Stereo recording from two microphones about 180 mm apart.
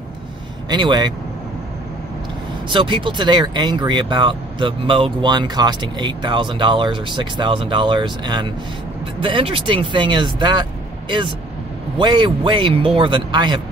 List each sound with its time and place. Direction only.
0.7 s speech: 25° right (ahead or behind)
2.7 s speech: 25° right (ahead or behind)